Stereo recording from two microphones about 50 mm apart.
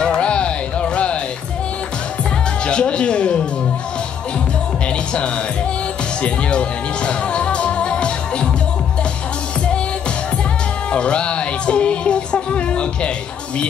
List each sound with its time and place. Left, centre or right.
0.0 s music: left
2.6 s music: left
7.1 s music: left
10.9 s music: left